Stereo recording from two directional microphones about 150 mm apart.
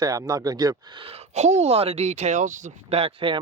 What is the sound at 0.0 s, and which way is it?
Speech, 25° right (ahead or behind).